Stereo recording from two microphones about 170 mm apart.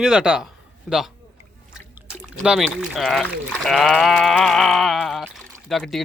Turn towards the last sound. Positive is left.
turn(degrees=0)  # may be behind; listen again after turning